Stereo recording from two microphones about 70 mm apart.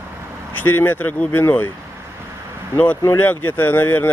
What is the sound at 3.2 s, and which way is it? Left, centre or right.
Speech, left.